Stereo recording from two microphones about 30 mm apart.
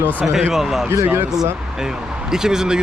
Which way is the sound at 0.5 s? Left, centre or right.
Centre.